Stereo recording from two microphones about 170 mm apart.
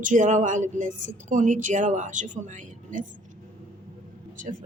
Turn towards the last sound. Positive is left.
turn(degrees=-50)  # may be behind; listen again after turning